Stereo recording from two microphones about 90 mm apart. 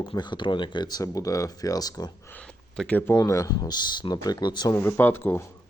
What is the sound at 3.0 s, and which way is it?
Speech, 30° left (ahead or behind).